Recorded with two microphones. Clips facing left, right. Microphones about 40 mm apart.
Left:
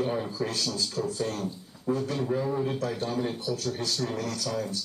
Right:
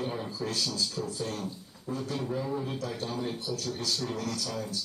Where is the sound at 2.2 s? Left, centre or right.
Centre.